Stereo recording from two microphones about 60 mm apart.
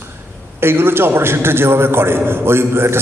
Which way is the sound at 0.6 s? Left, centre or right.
Right.